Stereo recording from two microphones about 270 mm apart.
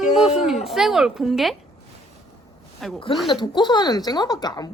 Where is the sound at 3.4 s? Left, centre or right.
Centre.